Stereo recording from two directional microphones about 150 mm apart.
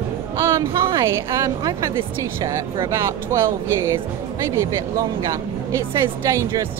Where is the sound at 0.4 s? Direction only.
20° right (ahead or behind).